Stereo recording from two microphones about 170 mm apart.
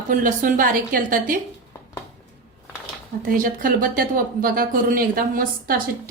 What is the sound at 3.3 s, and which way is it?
Speech, 55° right (ahead or behind).